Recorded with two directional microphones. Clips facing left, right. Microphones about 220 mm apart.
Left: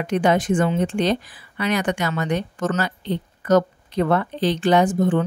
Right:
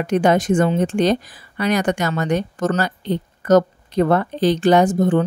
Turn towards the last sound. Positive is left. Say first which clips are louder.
# right 3 dB
turn(degrees=-40)  # may be behind; listen again after turning